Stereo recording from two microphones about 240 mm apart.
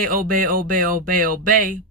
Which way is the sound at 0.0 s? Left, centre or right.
Right.